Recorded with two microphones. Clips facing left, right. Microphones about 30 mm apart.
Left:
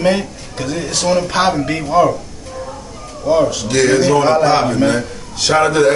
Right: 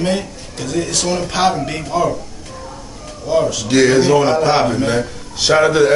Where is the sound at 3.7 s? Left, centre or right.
Centre.